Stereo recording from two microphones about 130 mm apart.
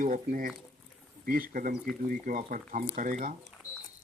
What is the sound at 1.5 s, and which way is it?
Speech, 90° right.